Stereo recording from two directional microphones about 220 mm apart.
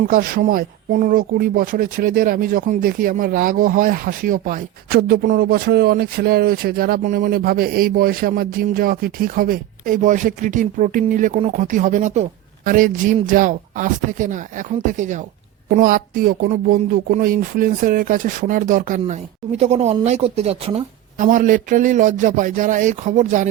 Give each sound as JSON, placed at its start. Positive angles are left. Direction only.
{"t": 0.1, "sound": "speech", "side_deg": -40}